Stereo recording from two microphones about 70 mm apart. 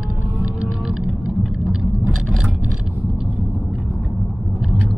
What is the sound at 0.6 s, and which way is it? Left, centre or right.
Music, centre.